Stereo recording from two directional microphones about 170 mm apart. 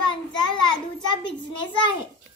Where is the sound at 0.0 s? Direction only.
25° left (ahead or behind).